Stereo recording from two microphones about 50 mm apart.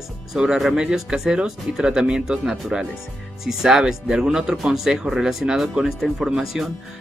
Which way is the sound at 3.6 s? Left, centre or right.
Centre.